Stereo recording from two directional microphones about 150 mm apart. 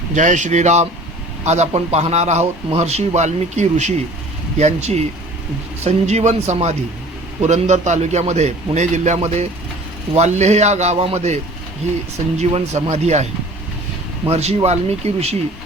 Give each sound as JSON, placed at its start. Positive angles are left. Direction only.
{"t": 0.1, "sound": "a man's voice", "side_deg": -55}
{"t": 12.4, "sound": "a man's voice", "side_deg": -45}
{"t": 14.3, "sound": "a man's voice", "side_deg": -45}